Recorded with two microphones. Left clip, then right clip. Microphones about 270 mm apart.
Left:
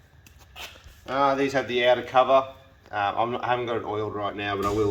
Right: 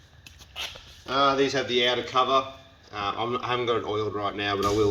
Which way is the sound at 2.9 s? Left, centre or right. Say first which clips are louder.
Left 3 dB; centre.